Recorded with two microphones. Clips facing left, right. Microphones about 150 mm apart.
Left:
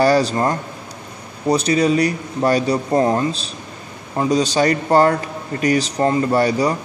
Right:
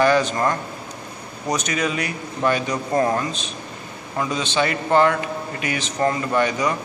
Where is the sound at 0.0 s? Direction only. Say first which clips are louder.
Left 3 dB; 35° left (ahead or behind).